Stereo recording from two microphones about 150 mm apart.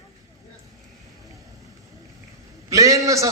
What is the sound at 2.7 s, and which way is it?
Speech, 20° right (ahead or behind).